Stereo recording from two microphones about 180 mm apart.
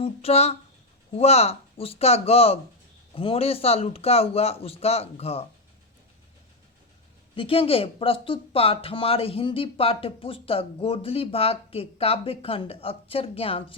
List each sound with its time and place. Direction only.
0.0 s speech: 35° left (ahead or behind)
7.3 s speech: 30° left (ahead or behind)